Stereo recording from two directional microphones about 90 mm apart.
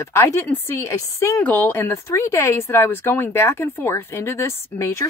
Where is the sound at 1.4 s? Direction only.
20° left (ahead or behind).